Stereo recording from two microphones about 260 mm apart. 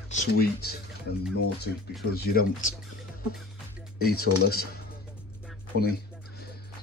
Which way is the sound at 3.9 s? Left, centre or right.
Left.